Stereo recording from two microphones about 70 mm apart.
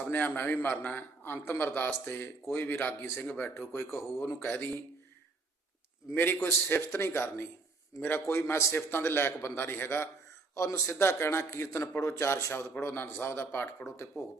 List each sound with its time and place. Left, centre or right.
0.1 s a man's voice: left
6.1 s a man's voice: left
10.5 s a man's voice: left